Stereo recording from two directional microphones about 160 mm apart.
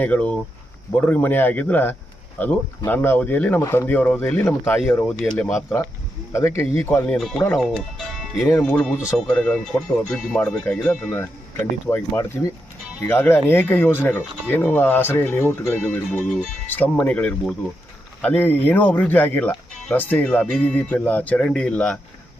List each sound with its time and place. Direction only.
0.0 s speech: 10° left (ahead or behind)
7.2 s speech: 5° left (ahead or behind)